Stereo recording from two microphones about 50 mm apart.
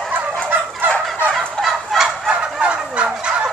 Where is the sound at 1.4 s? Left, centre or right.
Centre.